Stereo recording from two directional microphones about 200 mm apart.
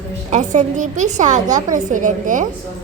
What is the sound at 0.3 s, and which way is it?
A child's voice, 40° right (ahead or behind).